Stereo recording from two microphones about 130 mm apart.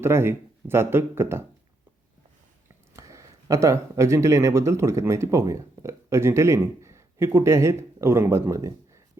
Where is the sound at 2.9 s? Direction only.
25° right (ahead or behind).